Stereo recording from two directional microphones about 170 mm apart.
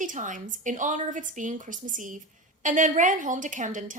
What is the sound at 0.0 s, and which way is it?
A woman's voice, 50° right (ahead or behind).